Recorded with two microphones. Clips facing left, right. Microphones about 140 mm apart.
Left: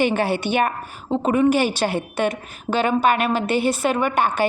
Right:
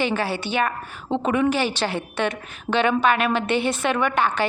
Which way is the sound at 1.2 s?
40° left (ahead or behind).